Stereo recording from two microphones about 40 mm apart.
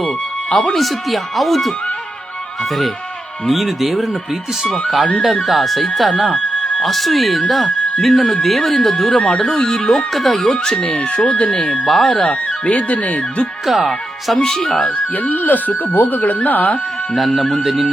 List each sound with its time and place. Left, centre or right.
0.7 s speech: centre
3.5 s speech: centre
10.9 s speech: left
11.5 s speech: centre
11.9 s speech: centre
12.2 s speech: left
13.7 s speech: centre
14.3 s speech: centre
14.8 s speech: left
17.2 s speech: centre